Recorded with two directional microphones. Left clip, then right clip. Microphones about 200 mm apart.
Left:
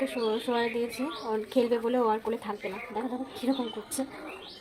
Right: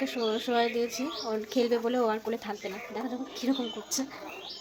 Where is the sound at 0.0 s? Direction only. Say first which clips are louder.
Left 1 dB; centre (ahead or behind).